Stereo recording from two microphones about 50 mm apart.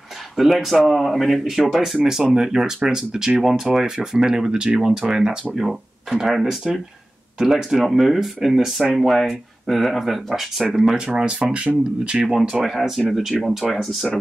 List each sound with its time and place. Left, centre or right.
0.4 s speech: centre
11.1 s speech: right
12.3 s speech: centre